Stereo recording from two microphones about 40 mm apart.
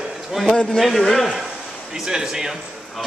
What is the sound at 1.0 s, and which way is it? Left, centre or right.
Speech, centre.